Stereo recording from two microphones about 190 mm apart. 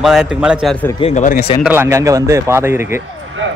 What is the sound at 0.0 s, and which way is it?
Speech, 5° right (ahead or behind).